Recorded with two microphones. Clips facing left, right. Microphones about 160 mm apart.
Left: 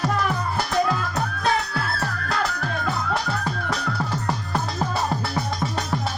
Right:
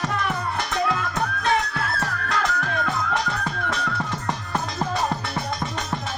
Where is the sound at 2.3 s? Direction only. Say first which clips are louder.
Right 1 dB; 35° left (ahead or behind).